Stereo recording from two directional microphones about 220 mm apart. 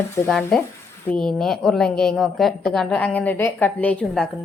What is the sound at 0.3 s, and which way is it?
A woman's voice, centre (ahead or behind).